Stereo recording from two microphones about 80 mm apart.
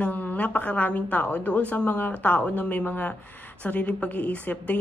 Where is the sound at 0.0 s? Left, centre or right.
Centre.